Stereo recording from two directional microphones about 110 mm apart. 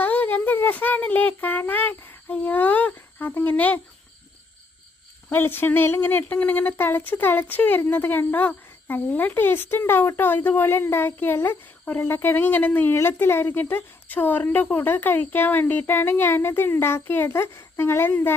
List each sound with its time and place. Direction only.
0.0 s speech: 15° left (ahead or behind)
5.3 s speech: 20° left (ahead or behind)